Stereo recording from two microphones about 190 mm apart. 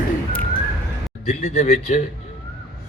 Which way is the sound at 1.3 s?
35° left (ahead or behind).